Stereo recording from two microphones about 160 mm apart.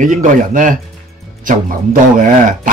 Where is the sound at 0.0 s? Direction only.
55° right (ahead or behind).